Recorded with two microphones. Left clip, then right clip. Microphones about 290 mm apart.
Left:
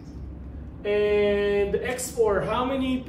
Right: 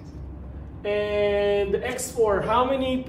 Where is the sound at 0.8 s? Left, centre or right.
Centre.